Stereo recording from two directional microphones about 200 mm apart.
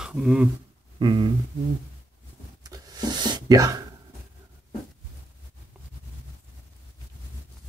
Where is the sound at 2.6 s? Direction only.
20° right (ahead or behind).